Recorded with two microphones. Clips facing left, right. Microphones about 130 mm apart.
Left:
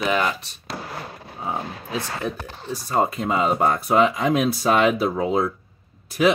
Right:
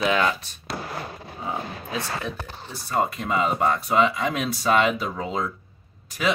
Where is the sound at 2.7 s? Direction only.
40° left (ahead or behind).